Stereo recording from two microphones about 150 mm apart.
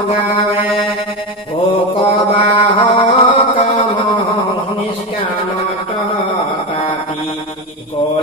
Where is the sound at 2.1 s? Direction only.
35° left (ahead or behind).